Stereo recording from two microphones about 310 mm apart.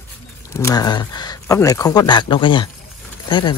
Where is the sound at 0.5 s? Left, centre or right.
Centre.